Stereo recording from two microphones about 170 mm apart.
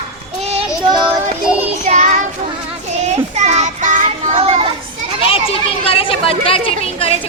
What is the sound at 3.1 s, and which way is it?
Child singing, 40° right (ahead or behind).